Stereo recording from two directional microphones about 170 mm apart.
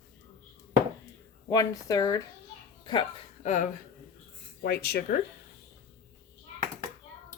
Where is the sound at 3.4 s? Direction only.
45° left (ahead or behind).